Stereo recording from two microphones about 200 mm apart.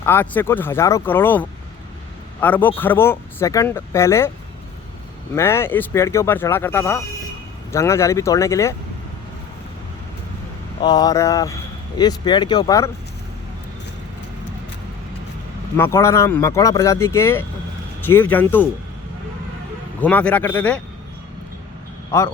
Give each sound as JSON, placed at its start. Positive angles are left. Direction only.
{"t": 0.0, "sound": "speech", "side_deg": 10}
{"t": 5.3, "sound": "speech", "side_deg": 15}
{"t": 10.8, "sound": "speech", "side_deg": 20}
{"t": 15.8, "sound": "speech", "side_deg": 15}
{"t": 20.0, "sound": "speech", "side_deg": 5}